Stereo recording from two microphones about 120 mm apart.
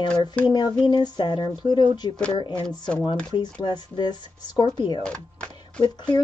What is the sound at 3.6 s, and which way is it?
Speech, 40° left (ahead or behind).